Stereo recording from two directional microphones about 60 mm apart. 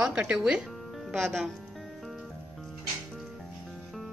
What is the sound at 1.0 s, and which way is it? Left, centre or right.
Speech, centre.